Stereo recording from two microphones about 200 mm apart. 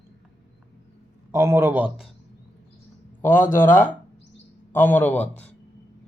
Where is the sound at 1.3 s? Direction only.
15° right (ahead or behind).